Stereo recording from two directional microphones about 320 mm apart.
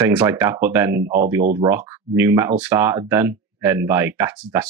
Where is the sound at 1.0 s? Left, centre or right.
Right.